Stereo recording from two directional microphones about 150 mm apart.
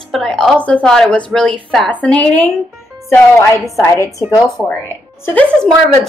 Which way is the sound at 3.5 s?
20° left (ahead or behind).